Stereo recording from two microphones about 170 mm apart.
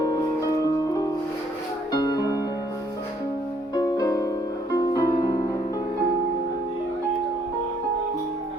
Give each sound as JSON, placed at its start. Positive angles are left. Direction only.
{"t": 1.9, "sound": "music", "side_deg": 20}
{"t": 3.8, "sound": "music", "side_deg": 20}